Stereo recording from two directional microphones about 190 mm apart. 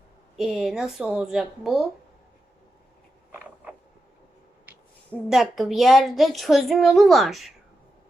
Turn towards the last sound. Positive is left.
turn(degrees=0)  # may be behind; listen again after turning